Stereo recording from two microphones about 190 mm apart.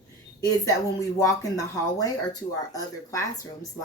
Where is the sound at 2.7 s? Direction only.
15° left (ahead or behind).